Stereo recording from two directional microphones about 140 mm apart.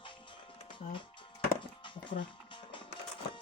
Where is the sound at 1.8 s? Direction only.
35° left (ahead or behind).